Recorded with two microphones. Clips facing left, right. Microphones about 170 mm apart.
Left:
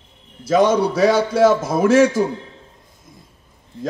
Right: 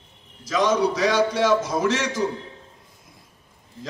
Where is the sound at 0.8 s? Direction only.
55° left (ahead or behind).